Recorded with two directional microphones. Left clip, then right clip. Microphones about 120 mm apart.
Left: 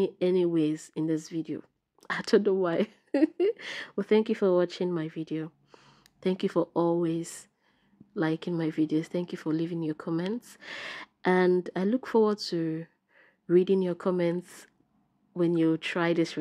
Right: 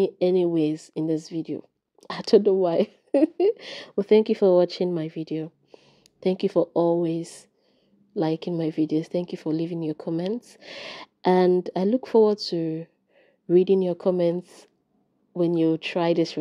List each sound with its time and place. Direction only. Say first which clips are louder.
0.0 s speech: right 5 dB; 20° right (ahead or behind)
5.7 s a sound: right 4 dB; 10° right (ahead or behind)
6.0 s speech: right 5 dB; 15° right (ahead or behind)